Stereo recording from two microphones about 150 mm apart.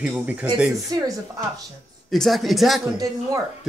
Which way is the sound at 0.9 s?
25° right (ahead or behind).